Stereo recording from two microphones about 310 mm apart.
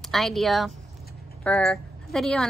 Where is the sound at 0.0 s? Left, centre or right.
Centre.